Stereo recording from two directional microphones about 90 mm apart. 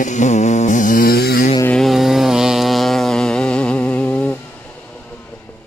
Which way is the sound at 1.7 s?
Centre (ahead or behind).